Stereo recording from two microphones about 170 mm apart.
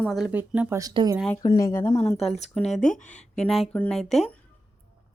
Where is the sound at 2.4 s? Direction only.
Centre (ahead or behind).